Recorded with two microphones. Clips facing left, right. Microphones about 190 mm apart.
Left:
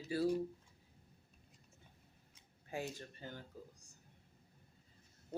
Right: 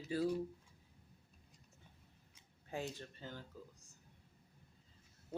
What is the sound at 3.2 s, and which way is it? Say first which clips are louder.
Speech: even; 50° left (ahead or behind).